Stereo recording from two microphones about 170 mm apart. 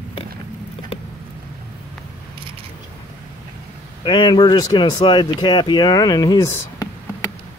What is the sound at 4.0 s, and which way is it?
Speech, 30° left (ahead or behind).